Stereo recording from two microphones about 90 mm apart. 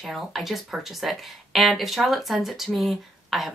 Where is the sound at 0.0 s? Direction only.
Centre (ahead or behind).